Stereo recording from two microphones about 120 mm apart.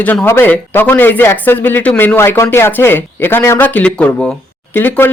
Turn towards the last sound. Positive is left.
turn(degrees=15)  # may be behind; listen again after turning